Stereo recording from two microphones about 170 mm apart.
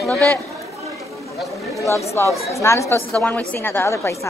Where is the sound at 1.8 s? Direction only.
20° left (ahead or behind).